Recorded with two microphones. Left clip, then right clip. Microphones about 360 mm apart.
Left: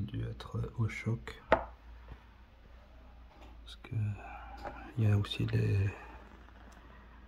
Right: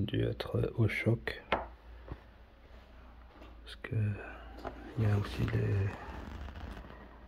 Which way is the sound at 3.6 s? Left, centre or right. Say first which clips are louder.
Right 7 dB; centre.